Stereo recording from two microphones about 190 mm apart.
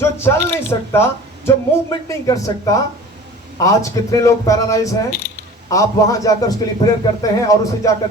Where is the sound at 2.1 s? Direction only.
15° left (ahead or behind).